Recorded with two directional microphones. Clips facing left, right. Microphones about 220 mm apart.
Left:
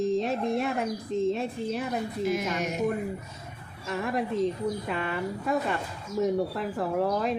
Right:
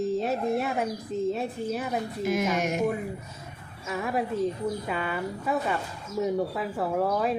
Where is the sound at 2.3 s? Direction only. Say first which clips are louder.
Right 4 dB; 50° right (ahead or behind).